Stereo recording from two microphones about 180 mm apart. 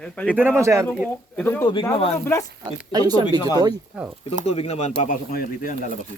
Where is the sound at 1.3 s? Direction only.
10° left (ahead or behind).